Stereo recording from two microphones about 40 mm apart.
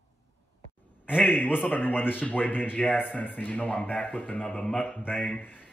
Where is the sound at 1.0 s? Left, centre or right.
Left.